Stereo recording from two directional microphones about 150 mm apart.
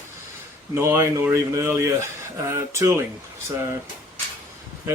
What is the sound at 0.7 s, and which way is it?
Speech, 20° right (ahead or behind).